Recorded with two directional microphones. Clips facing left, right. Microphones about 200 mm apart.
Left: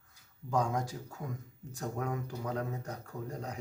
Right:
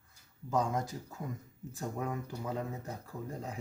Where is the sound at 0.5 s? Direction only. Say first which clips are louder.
Even; centre (ahead or behind).